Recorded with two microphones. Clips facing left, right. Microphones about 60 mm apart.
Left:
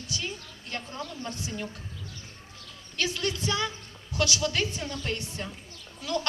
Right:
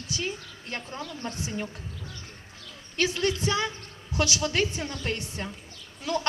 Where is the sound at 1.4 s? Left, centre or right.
Right.